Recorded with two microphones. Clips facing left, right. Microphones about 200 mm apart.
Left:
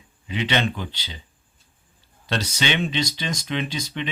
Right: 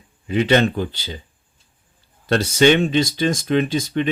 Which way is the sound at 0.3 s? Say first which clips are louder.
Right 8 dB; 45° right (ahead or behind).